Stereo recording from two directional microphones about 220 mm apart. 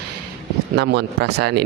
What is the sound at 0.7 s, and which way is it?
Speech, 50° right (ahead or behind).